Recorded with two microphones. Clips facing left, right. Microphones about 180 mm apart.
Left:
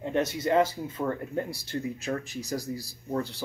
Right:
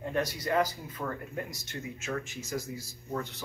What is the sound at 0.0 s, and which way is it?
Speech, 25° left (ahead or behind).